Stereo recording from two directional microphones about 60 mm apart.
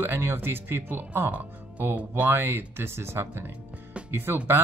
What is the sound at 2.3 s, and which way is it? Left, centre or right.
Speech, right.